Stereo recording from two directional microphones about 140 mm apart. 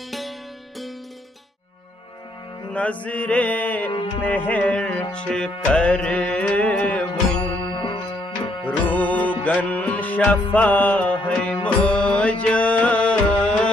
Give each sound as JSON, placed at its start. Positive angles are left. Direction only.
{"t": 2.7, "sound": "mantra", "side_deg": 10}
{"t": 4.2, "sound": "carnatic music", "side_deg": 10}
{"t": 5.1, "sound": "music", "side_deg": 5}
{"t": 7.6, "sound": "music", "side_deg": 35}
{"t": 8.6, "sound": "music", "side_deg": 10}